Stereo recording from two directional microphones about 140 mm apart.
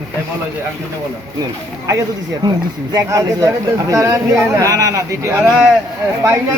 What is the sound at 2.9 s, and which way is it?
Speech, 25° right (ahead or behind).